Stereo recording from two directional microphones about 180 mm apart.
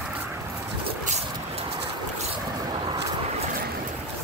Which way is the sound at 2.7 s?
25° right (ahead or behind).